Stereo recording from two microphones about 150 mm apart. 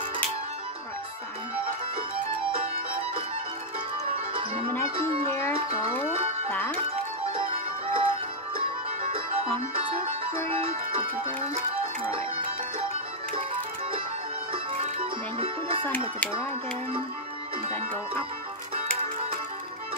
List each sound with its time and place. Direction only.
4.3 s music: 35° right (ahead or behind)
5.8 s speech: 15° left (ahead or behind)
6.5 s music: 10° left (ahead or behind)
7.3 s music: 35° right (ahead or behind)
10.5 s music: 40° right (ahead or behind)
14.5 s music: 35° right (ahead or behind)